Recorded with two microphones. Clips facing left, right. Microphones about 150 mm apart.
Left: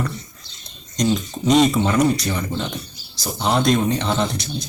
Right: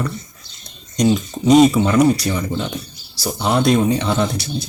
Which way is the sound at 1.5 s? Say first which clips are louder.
Right 4 dB; 5° right (ahead or behind).